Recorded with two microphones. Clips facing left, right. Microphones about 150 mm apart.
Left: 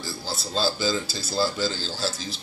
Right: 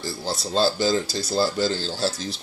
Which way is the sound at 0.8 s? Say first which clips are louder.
Right 4 dB; 55° right (ahead or behind).